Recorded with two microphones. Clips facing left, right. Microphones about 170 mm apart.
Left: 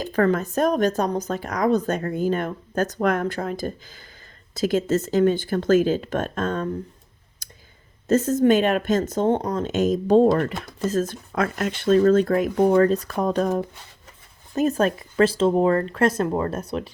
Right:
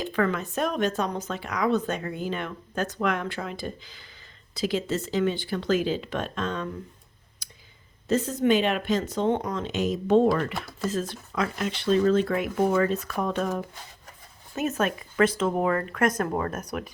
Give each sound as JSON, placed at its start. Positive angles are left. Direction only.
{"t": 0.0, "sound": "a woman's voice", "side_deg": 40}
{"t": 7.4, "sound": "clicking", "side_deg": 45}
{"t": 8.0, "sound": "a woman's voice", "side_deg": 45}